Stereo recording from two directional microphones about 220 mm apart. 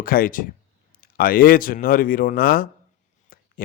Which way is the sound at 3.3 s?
40° left (ahead or behind).